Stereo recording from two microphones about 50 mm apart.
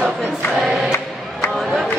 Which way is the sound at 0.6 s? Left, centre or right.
Centre.